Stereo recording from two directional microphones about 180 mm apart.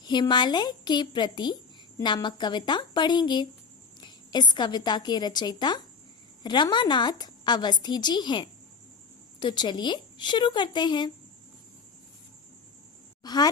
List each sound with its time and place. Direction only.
0.0 s a woman's voice: 25° left (ahead or behind)
13.2 s a woman's voice: 20° left (ahead or behind)